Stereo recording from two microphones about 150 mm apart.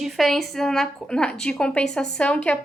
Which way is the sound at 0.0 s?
Centre (ahead or behind).